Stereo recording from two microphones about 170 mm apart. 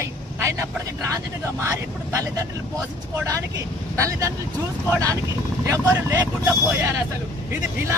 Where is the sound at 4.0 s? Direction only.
20° right (ahead or behind).